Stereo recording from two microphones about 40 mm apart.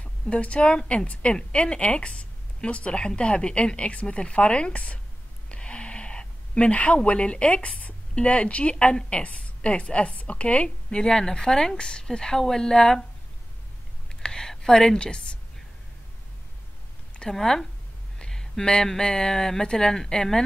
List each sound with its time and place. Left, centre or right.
0.0 s a woman's voice: left
4.7 s a woman's voice: left
5.5 s a sound: left
8.1 s a woman's voice: left
14.2 s a sound: centre
14.7 s speech: centre
17.3 s speech: centre
18.2 s a sound: centre
18.9 s speech: centre